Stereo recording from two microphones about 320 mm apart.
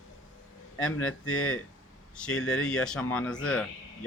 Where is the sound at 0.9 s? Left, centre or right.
Left.